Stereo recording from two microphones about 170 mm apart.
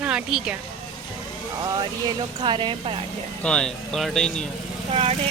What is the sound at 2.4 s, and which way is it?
Speech, 30° right (ahead or behind).